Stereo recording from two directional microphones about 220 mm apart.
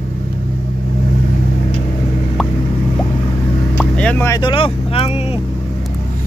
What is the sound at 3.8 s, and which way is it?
Speech, 5° left (ahead or behind).